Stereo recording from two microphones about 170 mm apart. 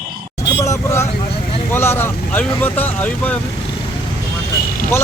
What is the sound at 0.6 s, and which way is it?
Vehicle, 15° left (ahead or behind).